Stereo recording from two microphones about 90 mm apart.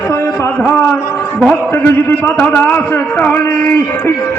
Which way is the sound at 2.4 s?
20° left (ahead or behind).